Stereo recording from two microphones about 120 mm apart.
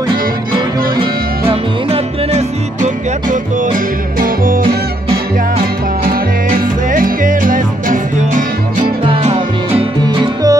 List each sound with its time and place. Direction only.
1.5 s music: 50° right (ahead or behind)
6.9 s music: 90° right
9.2 s music: 65° right (ahead or behind)
10.0 s music: 30° right (ahead or behind)